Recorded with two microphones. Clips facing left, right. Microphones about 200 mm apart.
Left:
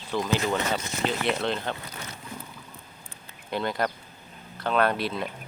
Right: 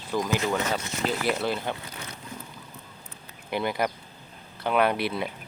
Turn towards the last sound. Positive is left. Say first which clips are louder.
# right 1 dB
turn(degrees=-10)  # may be behind; listen again after turning